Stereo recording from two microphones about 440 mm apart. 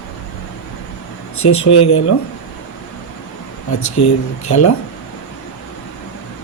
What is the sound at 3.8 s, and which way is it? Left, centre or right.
Speech, left.